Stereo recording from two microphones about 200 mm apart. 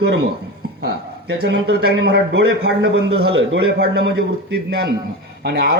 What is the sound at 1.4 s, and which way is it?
A man's voice, 55° right (ahead or behind).